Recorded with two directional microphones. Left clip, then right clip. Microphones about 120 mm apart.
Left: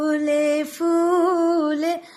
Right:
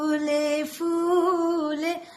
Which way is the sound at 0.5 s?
60° left (ahead or behind).